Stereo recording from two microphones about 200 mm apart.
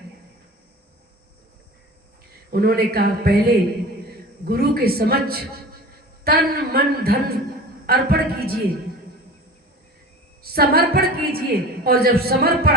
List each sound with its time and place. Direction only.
2.5 s a woman's voice: 50° right (ahead or behind)
4.4 s a woman's voice: 50° right (ahead or behind)
10.4 s a woman's voice: 50° right (ahead or behind)